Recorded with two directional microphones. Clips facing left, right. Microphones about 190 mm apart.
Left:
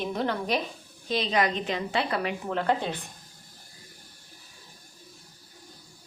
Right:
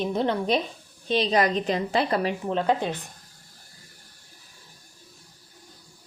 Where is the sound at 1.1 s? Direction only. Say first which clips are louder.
Right 4 dB; 35° right (ahead or behind).